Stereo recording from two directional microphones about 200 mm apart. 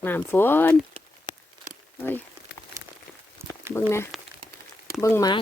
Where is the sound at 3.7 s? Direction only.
10° left (ahead or behind).